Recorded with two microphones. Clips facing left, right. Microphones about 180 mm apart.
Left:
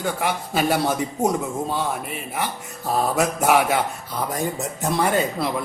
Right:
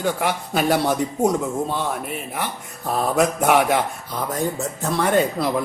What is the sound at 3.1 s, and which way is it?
Speech, 5° left (ahead or behind).